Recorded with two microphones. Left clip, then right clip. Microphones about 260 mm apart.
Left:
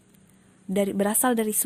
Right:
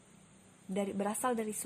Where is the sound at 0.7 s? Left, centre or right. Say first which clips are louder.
Left 11 dB; left.